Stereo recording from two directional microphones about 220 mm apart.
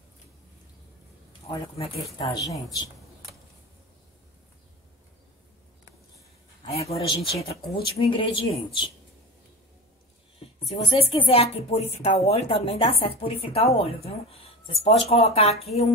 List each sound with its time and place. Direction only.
1.5 s speech: 15° left (ahead or behind)
6.6 s speech: 25° left (ahead or behind)
10.6 s speech: 25° left (ahead or behind)